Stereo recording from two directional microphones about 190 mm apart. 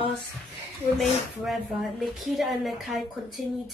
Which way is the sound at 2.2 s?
Centre (ahead or behind).